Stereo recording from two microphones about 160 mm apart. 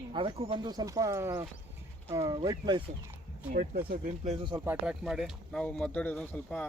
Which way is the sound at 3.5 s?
65° right (ahead or behind).